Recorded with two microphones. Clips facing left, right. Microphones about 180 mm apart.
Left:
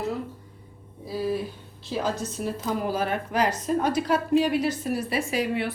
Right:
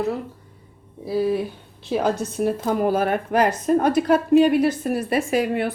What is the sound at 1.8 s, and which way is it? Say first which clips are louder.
A woman's voice: right 6 dB; 60° right (ahead or behind).